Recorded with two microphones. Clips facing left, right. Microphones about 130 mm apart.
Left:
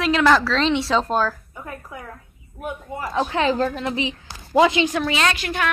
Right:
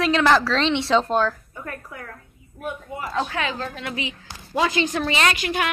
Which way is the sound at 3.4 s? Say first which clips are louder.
Left 8 dB; 30° left (ahead or behind).